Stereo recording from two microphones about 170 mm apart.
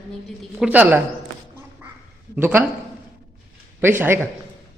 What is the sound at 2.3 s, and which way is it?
Speech, 10° right (ahead or behind).